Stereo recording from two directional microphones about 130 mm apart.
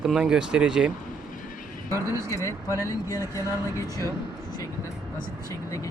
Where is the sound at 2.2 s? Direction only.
25° left (ahead or behind).